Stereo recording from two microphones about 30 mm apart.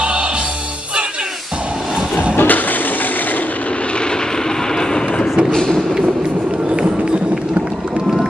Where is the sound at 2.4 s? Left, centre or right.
Left.